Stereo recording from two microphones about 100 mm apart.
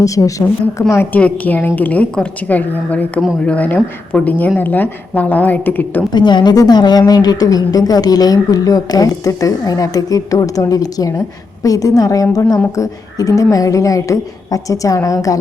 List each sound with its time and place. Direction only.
0.0 s a woman's voice: 35° left (ahead or behind)
1.1 s a woman's voice: 15° left (ahead or behind)
6.1 s a woman's voice: 45° left (ahead or behind)